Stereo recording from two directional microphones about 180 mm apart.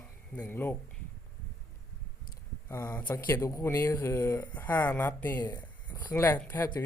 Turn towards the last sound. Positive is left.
turn(degrees=10)  # may be behind; listen again after turning